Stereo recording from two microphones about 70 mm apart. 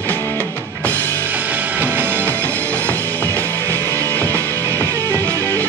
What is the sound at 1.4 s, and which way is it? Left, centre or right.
Music, right.